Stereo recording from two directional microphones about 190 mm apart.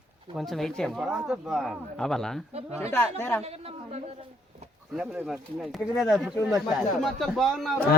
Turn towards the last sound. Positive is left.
turn(degrees=0)  # may be behind; listen again after turning